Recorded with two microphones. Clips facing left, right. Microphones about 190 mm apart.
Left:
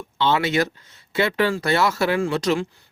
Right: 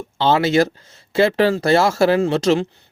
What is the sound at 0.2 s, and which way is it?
A man's voice, 30° right (ahead or behind).